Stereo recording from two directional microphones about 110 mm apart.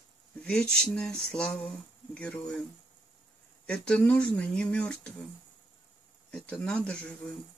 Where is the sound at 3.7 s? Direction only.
10° left (ahead or behind).